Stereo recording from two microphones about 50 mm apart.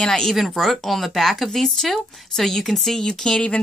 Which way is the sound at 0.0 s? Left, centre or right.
Centre.